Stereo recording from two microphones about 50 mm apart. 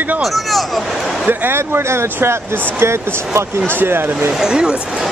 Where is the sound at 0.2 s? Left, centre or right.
Centre.